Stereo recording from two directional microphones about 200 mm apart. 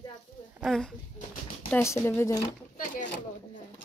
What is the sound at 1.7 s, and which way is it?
Speech, 15° left (ahead or behind).